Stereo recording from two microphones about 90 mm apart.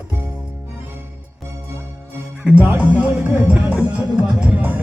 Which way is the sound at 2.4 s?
10° right (ahead or behind).